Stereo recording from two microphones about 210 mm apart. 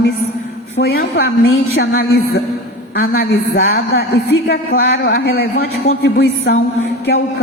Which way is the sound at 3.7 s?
55° left (ahead or behind).